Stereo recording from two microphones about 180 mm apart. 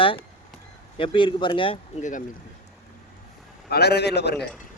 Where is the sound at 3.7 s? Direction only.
65° left (ahead or behind).